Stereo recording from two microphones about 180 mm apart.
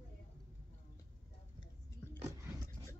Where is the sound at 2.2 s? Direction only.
15° right (ahead or behind).